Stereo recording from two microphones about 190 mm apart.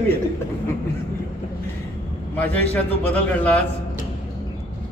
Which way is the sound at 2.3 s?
10° left (ahead or behind).